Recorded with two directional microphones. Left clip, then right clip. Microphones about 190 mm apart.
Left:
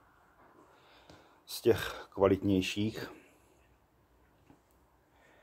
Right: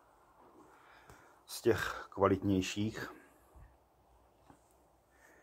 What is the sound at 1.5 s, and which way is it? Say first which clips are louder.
Speech: left 3 dB; 10° left (ahead or behind).